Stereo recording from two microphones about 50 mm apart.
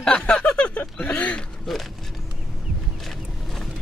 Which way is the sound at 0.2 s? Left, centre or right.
Left.